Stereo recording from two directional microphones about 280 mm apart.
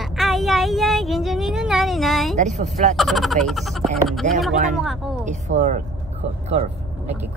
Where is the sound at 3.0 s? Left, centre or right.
Centre.